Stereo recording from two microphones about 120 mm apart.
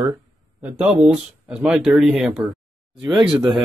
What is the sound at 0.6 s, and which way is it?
Speech, 10° right (ahead or behind).